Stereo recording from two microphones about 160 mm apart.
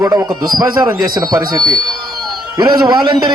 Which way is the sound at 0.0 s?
15° right (ahead or behind).